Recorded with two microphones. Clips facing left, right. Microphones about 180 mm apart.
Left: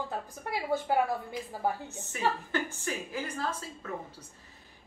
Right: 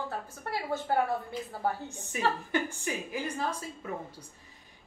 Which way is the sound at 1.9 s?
15° right (ahead or behind).